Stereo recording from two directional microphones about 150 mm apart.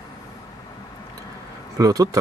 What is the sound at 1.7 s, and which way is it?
Speech, 25° right (ahead or behind).